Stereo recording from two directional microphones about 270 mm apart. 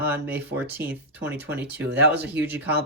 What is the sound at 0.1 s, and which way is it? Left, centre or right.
Speech, centre.